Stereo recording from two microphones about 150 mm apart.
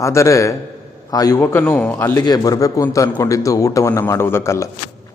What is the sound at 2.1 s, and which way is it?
Speech, 25° left (ahead or behind).